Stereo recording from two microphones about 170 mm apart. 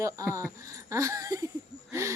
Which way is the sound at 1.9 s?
15° right (ahead or behind).